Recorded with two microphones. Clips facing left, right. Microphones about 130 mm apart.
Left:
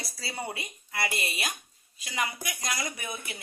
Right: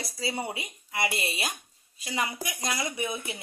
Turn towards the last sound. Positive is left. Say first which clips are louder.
# right 5 dB
turn(degrees=-25)  # may be behind; listen again after turning